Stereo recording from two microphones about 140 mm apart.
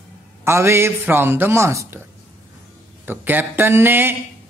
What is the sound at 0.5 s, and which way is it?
Speech, 20° right (ahead or behind).